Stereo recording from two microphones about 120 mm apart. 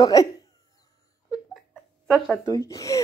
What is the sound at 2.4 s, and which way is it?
Speech, 30° left (ahead or behind).